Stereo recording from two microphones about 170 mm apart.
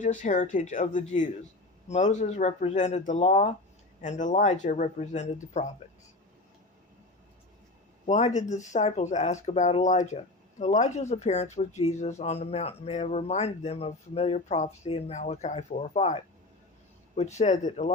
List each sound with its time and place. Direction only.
0.0 s speech: 45° left (ahead or behind)
8.0 s speech: 40° left (ahead or behind)